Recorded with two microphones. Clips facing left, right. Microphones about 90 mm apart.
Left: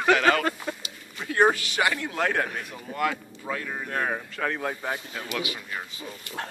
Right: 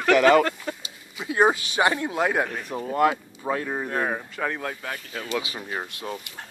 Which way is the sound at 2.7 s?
35° right (ahead or behind).